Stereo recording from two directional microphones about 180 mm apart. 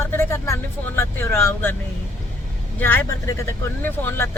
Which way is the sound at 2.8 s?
10° left (ahead or behind).